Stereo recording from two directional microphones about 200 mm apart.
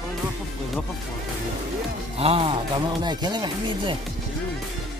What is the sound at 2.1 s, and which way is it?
Speech, 30° right (ahead or behind).